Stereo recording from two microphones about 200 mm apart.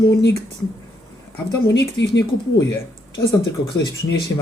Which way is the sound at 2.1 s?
15° left (ahead or behind).